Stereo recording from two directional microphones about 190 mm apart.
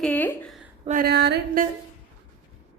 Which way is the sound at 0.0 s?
10° left (ahead or behind).